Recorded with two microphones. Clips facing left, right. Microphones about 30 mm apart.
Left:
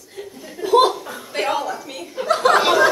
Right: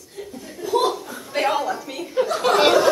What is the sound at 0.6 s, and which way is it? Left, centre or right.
Chuckle, left.